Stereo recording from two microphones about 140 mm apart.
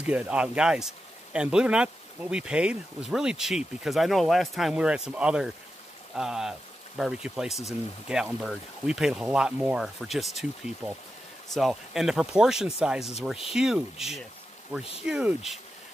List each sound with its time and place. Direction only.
0.0 s speech: 10° right (ahead or behind)